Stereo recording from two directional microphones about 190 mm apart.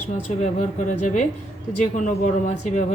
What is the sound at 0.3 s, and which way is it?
Speech, 40° left (ahead or behind).